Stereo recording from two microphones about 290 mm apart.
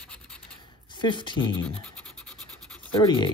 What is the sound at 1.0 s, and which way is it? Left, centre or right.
Speech, centre.